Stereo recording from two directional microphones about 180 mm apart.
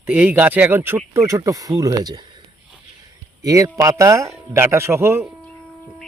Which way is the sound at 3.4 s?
20° right (ahead or behind).